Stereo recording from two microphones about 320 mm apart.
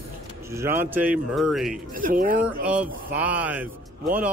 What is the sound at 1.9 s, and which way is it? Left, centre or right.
Speech, right.